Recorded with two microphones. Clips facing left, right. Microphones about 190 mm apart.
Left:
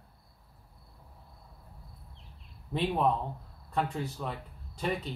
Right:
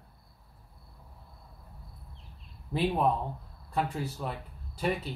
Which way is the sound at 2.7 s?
5° right (ahead or behind).